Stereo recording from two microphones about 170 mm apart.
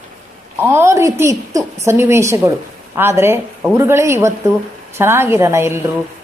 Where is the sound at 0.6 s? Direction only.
15° right (ahead or behind).